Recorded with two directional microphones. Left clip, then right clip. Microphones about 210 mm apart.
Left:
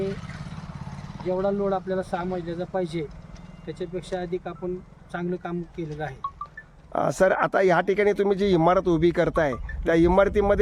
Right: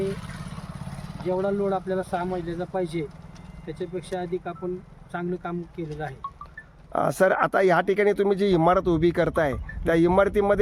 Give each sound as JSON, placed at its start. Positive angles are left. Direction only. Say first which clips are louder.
{"t": 0.0, "sound": "vehicle", "louder": "right 1 dB", "side_deg": -55}
{"t": 1.3, "sound": "speech", "louder": "even", "side_deg": -15}
{"t": 6.2, "sound": "liquid", "louder": "left 3 dB", "side_deg": 25}
{"t": 6.9, "sound": "speech", "louder": "even", "side_deg": -5}